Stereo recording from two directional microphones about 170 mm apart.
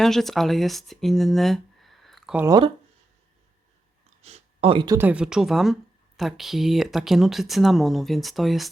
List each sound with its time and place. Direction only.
0.0 s speech: centre (ahead or behind)
2.4 s speech: 25° right (ahead or behind)
4.2 s a sound: 35° right (ahead or behind)
4.9 s speech: 10° right (ahead or behind)